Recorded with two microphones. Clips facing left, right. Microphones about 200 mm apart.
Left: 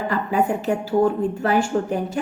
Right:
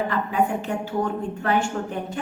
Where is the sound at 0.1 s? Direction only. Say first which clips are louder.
Left 2 dB; 35° left (ahead or behind).